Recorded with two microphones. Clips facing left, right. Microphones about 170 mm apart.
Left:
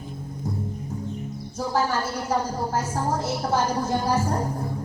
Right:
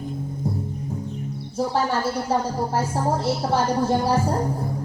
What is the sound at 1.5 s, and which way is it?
A woman's voice, 30° right (ahead or behind).